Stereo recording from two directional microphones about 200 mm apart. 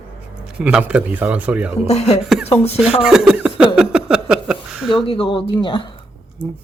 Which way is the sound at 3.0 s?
5° right (ahead or behind).